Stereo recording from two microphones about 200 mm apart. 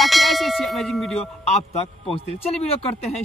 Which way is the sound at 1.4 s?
30° left (ahead or behind).